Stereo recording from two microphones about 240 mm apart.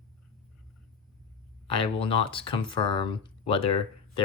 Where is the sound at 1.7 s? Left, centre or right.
Left.